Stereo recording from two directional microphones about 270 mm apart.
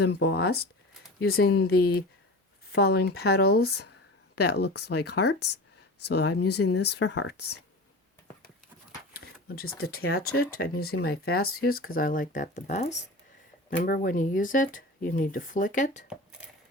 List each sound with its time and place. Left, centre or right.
0.0 s speech: left
4.8 s speech: left
5.2 s speech: left
6.0 s speech: left
7.0 s speech: left
9.1 s speech: left